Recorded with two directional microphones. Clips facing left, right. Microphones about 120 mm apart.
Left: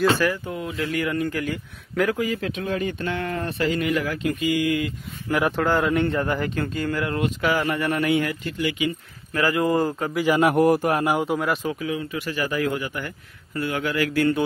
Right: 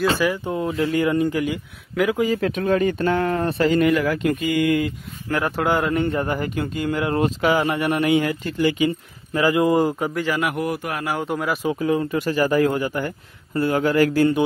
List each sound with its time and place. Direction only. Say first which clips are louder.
0.1 s speech: right 1 dB; 15° right (ahead or behind)
0.5 s speech: right 6 dB; 30° right (ahead or behind)
2.1 s speech: right 5 dB; 30° right (ahead or behind)
2.4 s speech: right 6 dB; 50° right (ahead or behind)
3.9 s speech: right 4 dB; 60° right (ahead or behind)
5.6 s a man's voice: right 2 dB; 5° right (ahead or behind)
7.2 s speech: right 5 dB; 35° right (ahead or behind)
7.5 s speech: right 3 dB; 20° right (ahead or behind); by 8.9 s 35° right (ahead or behind)
9.3 s speech: right 3 dB; 20° right (ahead or behind)
10.4 s a man's voice: left 6 dB; 40° left (ahead or behind)
11.2 s a man's voice: even; centre (ahead or behind)
11.7 s speech: right 7 dB; 45° right (ahead or behind)